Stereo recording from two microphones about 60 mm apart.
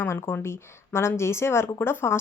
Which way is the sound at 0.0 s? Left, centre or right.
Left.